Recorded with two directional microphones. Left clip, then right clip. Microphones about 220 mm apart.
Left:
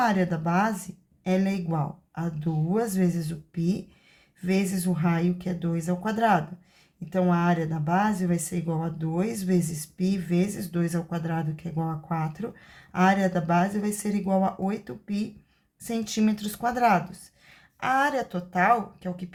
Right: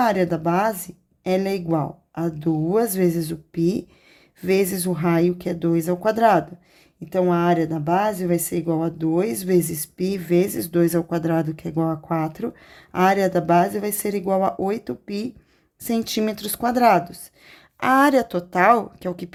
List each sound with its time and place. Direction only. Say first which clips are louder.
0.0 s speech: right 5 dB; 40° right (ahead or behind)